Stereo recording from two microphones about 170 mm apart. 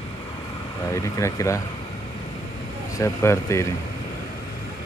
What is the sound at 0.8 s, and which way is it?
Speech, 20° left (ahead or behind).